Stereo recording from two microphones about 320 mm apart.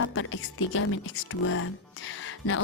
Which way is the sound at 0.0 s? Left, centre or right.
Left.